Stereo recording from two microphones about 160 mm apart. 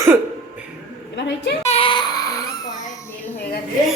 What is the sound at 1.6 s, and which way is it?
Baby cry, 40° left (ahead or behind).